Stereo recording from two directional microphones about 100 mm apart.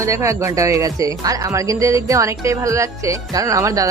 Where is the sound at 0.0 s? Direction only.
30° right (ahead or behind).